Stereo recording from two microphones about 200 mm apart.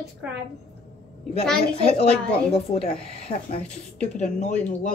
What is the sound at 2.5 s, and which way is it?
Speech, 30° left (ahead or behind).